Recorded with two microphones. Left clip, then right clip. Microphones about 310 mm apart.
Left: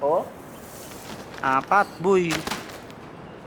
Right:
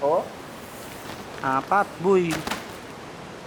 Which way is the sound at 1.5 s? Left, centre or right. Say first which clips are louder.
Left 2 dB; centre.